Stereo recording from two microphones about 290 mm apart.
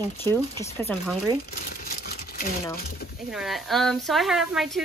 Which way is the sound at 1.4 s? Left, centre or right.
Left.